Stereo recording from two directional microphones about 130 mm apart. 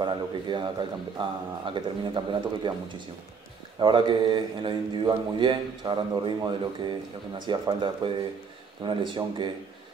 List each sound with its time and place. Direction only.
0.0 s speech: 35° right (ahead or behind)